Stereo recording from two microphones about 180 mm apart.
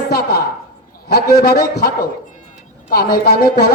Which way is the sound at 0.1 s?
60° left (ahead or behind).